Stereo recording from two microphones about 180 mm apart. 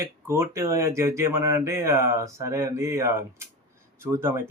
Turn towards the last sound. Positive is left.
turn(degrees=-15)  # may be behind; listen again after turning